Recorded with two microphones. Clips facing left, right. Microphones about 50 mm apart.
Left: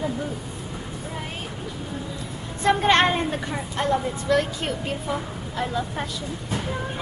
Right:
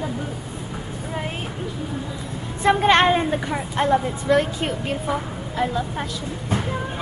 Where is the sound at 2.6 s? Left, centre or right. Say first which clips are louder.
Right 2 dB; centre.